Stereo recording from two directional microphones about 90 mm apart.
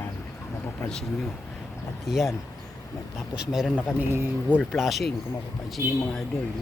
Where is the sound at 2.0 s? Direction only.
5° right (ahead or behind).